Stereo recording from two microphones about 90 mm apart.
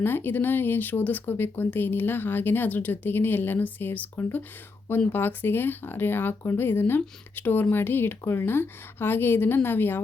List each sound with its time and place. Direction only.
0.0 s speech: 25° left (ahead or behind)